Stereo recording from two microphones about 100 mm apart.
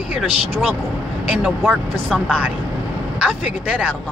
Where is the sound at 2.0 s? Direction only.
5° left (ahead or behind).